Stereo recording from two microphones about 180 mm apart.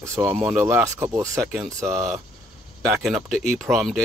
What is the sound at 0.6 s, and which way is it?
Speech, 15° right (ahead or behind).